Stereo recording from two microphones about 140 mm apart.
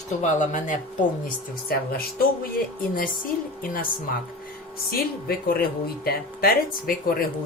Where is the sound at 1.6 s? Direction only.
90° left.